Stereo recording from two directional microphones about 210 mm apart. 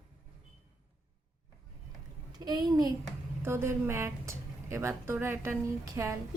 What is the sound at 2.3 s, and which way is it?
A child's voice, 20° right (ahead or behind).